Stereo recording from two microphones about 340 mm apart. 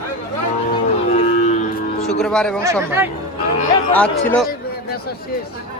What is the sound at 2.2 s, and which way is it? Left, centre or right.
Speech, centre.